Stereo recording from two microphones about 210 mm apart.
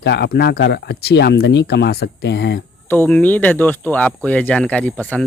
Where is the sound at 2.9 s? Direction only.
10° left (ahead or behind).